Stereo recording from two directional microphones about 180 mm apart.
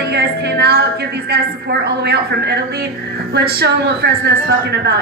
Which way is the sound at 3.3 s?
65° right (ahead or behind).